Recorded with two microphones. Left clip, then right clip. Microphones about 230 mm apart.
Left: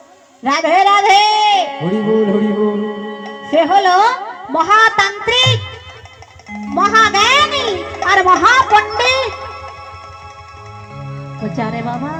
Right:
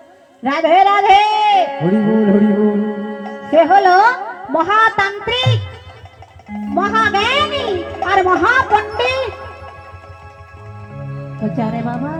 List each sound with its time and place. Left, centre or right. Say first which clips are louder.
0.4 s a man's voice: even; right
11.1 s speech: right 1 dB; right